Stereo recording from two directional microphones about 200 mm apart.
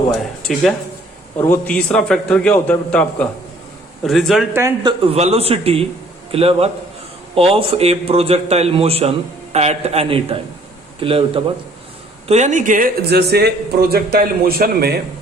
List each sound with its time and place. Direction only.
0.1 s a man's voice: centre (ahead or behind)
4.5 s a man's voice: 20° right (ahead or behind); by 14.9 s 50° right (ahead or behind)